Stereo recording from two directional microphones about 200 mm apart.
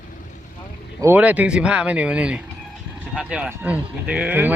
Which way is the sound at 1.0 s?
10° right (ahead or behind).